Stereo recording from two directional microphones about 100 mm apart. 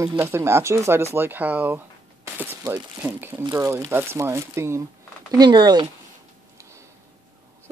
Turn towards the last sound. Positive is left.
turn(degrees=-50)  # may be behind; listen again after turning